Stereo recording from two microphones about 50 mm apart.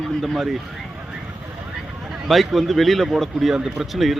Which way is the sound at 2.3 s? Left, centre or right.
Centre.